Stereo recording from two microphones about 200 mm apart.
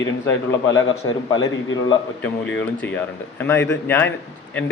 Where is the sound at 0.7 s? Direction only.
75° left (ahead or behind).